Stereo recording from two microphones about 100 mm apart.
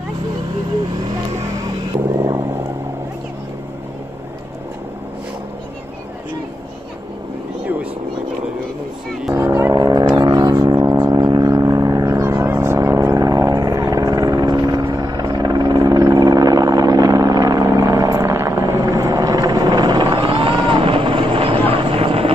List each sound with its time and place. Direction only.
2.1 s vehicle: 25° right (ahead or behind)
9.8 s vehicle: 40° right (ahead or behind)
15.0 s helicopter: 45° right (ahead or behind); by 22.3 s 70° right (ahead or behind)